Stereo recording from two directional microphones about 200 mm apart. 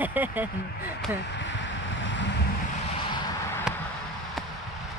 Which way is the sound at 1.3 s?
65° left (ahead or behind).